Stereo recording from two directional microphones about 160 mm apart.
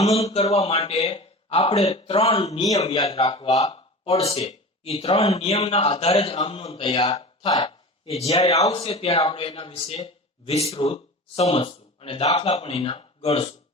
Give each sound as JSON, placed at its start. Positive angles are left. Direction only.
{"t": 0.0, "sound": "speech", "side_deg": 40}
{"t": 2.9, "sound": "speech", "side_deg": 25}
{"t": 3.2, "sound": "speech", "side_deg": 35}
{"t": 7.4, "sound": "a man's voice", "side_deg": 25}